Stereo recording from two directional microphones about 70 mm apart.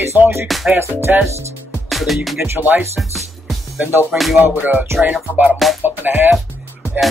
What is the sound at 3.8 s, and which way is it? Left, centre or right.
Speech, right.